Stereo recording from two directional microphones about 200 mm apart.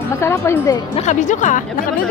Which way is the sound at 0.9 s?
35° left (ahead or behind).